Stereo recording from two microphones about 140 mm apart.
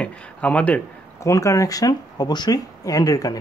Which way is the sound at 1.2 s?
20° left (ahead or behind).